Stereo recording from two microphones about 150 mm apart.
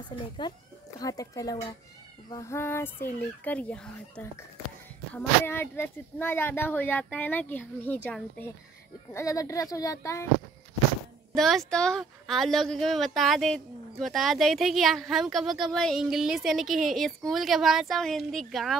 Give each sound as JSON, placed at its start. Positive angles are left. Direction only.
{"t": 0.4, "sound": "speech", "side_deg": 30}
{"t": 9.1, "sound": "speech", "side_deg": 20}
{"t": 11.3, "sound": "speech", "side_deg": 0}